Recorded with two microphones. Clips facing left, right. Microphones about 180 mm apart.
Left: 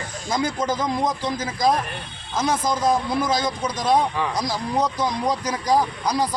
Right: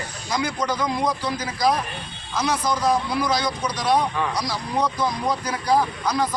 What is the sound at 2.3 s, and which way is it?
Speech, 50° left (ahead or behind).